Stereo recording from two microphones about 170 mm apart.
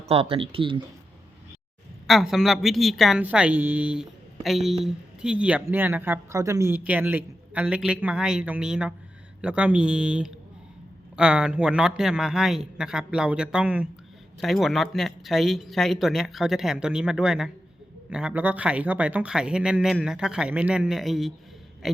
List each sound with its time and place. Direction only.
0.1 s speech: 35° right (ahead or behind)
2.0 s speech: centre (ahead or behind)